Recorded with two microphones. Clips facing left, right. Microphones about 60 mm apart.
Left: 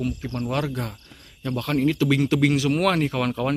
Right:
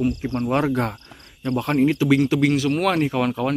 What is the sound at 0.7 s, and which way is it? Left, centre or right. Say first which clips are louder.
Speech: right 8 dB; right.